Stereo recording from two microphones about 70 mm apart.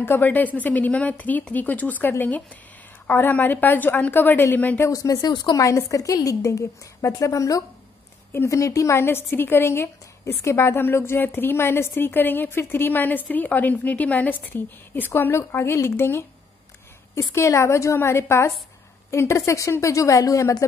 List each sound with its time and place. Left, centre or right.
0.0 s a woman's voice: left
4.8 s a woman's voice: left
5.3 s a woman's voice: left
5.6 s a woman's voice: left